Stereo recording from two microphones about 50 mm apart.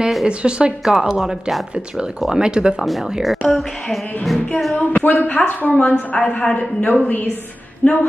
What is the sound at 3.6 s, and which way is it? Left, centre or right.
Speech, centre.